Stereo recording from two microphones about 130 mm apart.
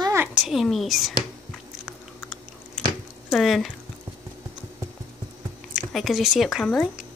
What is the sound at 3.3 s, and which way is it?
Speech, centre (ahead or behind).